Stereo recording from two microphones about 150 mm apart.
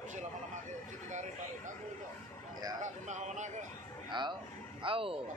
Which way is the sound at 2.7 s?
55° right (ahead or behind).